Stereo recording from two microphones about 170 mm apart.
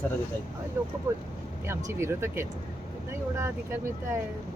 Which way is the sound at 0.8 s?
15° right (ahead or behind).